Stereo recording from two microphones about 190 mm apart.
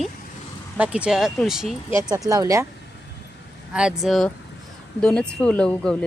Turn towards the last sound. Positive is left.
turn(degrees=5)  # may be behind; listen again after turning